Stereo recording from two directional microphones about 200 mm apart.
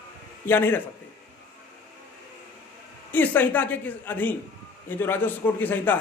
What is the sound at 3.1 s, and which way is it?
A man's voice, 10° left (ahead or behind).